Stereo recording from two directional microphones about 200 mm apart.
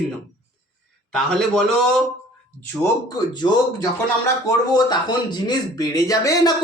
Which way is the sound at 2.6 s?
15° left (ahead or behind).